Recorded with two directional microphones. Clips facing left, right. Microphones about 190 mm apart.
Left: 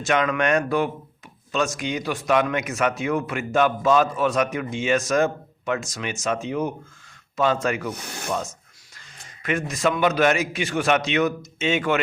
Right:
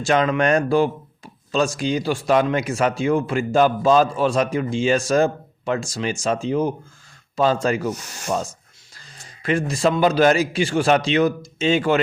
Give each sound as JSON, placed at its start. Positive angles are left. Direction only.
{"t": 0.0, "sound": "speech", "side_deg": -30}
{"t": 7.9, "sound": "speech", "side_deg": 60}
{"t": 8.3, "sound": "speech", "side_deg": -30}